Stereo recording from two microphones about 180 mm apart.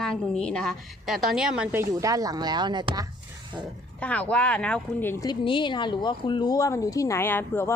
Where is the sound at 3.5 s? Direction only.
5° right (ahead or behind).